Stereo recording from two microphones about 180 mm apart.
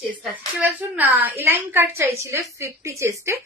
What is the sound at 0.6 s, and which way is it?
A woman's voice, 10° right (ahead or behind).